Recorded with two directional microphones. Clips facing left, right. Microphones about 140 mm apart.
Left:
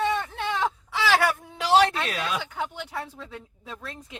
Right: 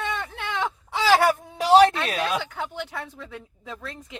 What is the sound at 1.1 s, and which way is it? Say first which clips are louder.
Speech: right 4 dB; 35° right (ahead or behind).